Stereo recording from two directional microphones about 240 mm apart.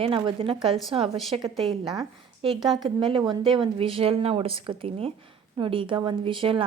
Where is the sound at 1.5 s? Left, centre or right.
Centre.